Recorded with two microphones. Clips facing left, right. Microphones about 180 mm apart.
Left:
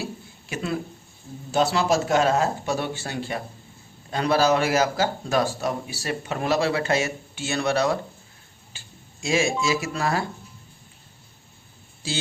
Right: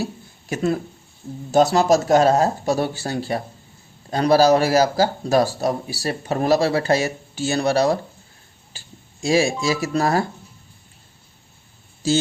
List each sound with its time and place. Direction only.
0.0 s a sound: 40° right (ahead or behind)
1.5 s speech: 45° right (ahead or behind)
8.7 s clicking: 35° right (ahead or behind)
9.2 s speech: 35° right (ahead or behind)